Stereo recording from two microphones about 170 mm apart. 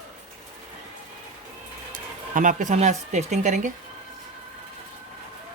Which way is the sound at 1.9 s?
50° right (ahead or behind).